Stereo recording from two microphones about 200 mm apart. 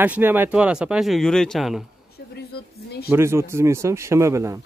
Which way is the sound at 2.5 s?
55° left (ahead or behind).